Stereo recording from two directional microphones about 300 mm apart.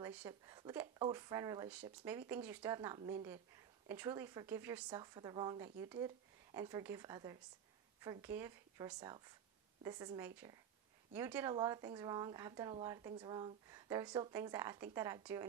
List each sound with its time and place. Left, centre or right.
0.0 s speech: centre